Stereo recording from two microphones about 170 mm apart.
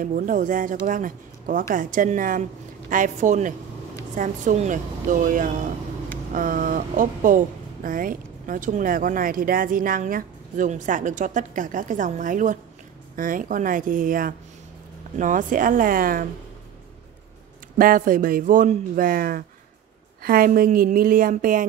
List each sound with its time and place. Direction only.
0.0 s a woman's voice: 50° right (ahead or behind)
17.7 s a woman's voice: 55° right (ahead or behind)